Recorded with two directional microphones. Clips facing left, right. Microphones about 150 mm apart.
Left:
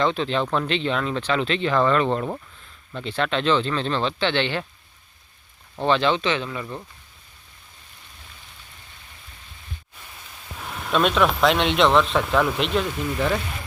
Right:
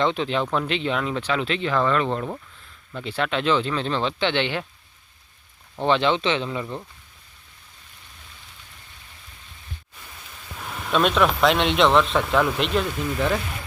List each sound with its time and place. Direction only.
0.0 s speech: 15° right (ahead or behind)
5.8 s speech: 20° right (ahead or behind)
10.6 s speech: centre (ahead or behind)